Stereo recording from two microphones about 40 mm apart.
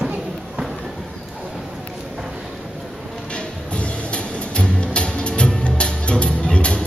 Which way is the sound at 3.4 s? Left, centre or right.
Left.